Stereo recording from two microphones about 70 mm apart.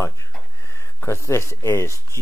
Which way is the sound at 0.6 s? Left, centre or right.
Left.